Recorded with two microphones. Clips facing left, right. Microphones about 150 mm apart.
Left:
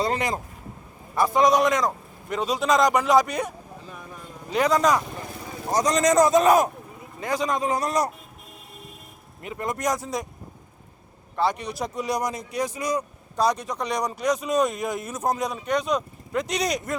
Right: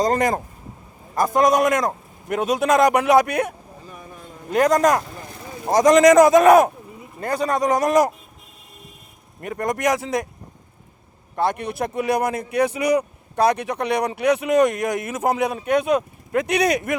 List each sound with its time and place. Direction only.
0.0 s a man's voice: 45° right (ahead or behind)
5.7 s speech: 90° right; by 6.7 s 65° right (ahead or behind)
7.2 s a man's voice: 55° right (ahead or behind); by 8.1 s 90° right
9.4 s a man's voice: 60° right (ahead or behind)
11.3 s speech: 55° right (ahead or behind); by 17.0 s 70° right (ahead or behind)